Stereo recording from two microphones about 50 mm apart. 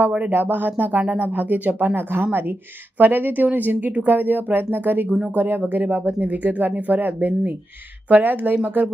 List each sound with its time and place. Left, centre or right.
0.3 s speech: right